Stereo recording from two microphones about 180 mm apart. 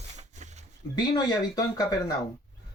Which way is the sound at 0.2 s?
40° right (ahead or behind).